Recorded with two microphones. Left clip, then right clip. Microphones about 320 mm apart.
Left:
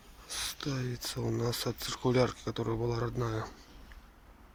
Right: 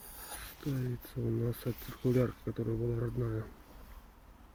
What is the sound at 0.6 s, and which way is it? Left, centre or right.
Speech, left.